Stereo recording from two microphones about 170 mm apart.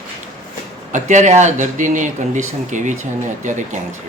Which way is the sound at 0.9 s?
45° right (ahead or behind).